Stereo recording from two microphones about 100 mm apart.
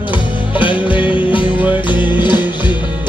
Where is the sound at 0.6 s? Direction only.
55° left (ahead or behind).